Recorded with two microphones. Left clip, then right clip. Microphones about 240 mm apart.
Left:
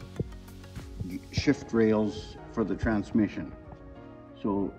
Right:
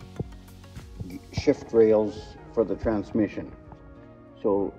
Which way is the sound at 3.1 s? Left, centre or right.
Centre.